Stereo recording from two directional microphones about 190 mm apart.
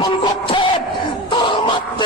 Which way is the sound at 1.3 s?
25° left (ahead or behind).